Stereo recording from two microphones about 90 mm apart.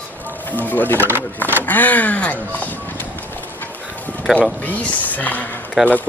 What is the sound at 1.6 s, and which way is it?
Speech, 20° left (ahead or behind).